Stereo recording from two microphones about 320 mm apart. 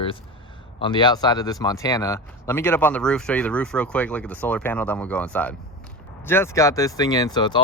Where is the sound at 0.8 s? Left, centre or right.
Centre.